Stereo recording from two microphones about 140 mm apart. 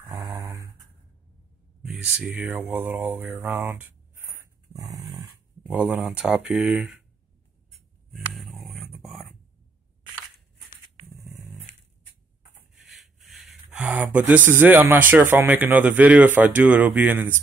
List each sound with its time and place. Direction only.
0.0 s a sound: 25° right (ahead or behind)
1.8 s speech: 5° right (ahead or behind); by 5.2 s 25° right (ahead or behind)
5.7 s speech: 10° right (ahead or behind)
7.7 s a sound: centre (ahead or behind)
12.7 s rub: centre (ahead or behind)
13.7 s speech: 10° right (ahead or behind)